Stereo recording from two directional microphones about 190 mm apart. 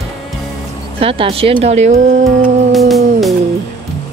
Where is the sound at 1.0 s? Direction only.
30° right (ahead or behind).